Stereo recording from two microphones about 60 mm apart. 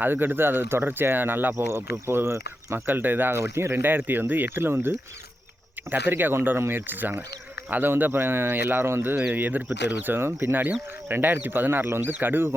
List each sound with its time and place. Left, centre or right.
0.0 s speech: right
1.5 s speech: right
2.8 s speech: right
9.3 s speech: right
10.1 s speech: right
10.6 s speech: right
11.9 s speech: right
12.2 s speech: right